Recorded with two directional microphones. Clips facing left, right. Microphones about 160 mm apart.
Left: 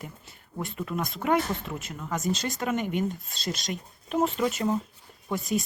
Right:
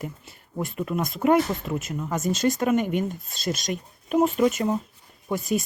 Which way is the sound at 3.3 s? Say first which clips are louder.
Right 5 dB; 20° left (ahead or behind).